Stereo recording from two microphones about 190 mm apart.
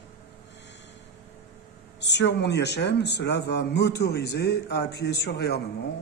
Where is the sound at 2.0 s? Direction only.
65° left (ahead or behind).